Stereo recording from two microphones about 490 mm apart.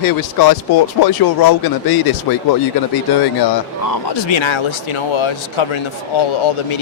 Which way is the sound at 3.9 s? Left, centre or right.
Left.